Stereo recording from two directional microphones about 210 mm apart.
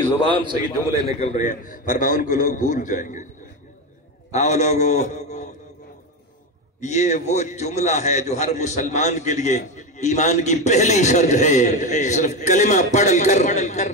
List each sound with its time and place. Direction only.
0.4 s a man's voice: 20° right (ahead or behind)
1.2 s a man's voice: 35° left (ahead or behind)
4.3 s a man's voice: 35° left (ahead or behind)
6.8 s a man's voice: 35° left (ahead or behind)